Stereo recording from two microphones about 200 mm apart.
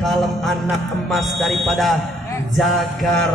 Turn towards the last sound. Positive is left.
turn(degrees=0)  # may be behind; listen again after turning